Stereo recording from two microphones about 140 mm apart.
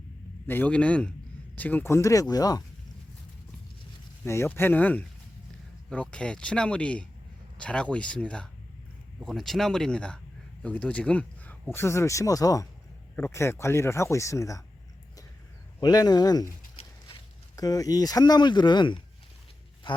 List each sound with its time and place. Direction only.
0.4 s speech: 15° left (ahead or behind)
4.2 s speech: 15° left (ahead or behind)
15.8 s speech: 30° left (ahead or behind)
16.8 s a sound: 45° left (ahead or behind)
17.6 s speech: 25° left (ahead or behind)